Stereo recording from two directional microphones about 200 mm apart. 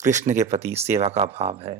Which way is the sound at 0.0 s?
35° right (ahead or behind).